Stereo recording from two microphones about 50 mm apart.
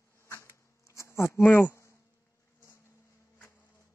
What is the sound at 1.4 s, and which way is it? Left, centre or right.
Speech, left.